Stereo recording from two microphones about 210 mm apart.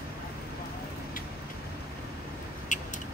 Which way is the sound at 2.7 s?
35° left (ahead or behind).